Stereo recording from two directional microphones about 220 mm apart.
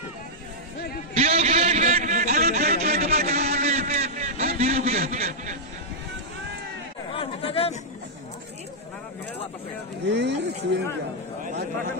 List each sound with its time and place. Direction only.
1.1 s a sound: 30° right (ahead or behind)
7.1 s chatter: 25° left (ahead or behind)
10.0 s speech: 50° right (ahead or behind)